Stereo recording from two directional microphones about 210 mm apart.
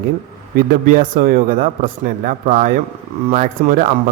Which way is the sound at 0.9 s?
40° right (ahead or behind).